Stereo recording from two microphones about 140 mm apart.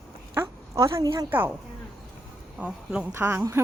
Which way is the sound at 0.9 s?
25° right (ahead or behind).